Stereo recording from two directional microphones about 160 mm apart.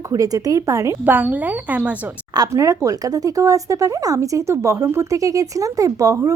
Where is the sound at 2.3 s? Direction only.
20° right (ahead or behind).